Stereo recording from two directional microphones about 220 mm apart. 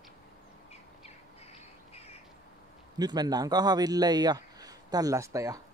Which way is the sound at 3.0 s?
20° right (ahead or behind).